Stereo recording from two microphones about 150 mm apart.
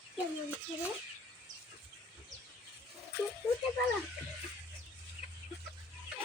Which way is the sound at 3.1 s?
90° left.